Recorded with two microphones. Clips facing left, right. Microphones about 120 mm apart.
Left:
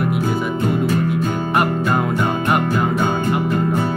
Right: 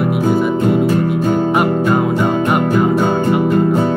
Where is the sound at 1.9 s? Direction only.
Centre (ahead or behind).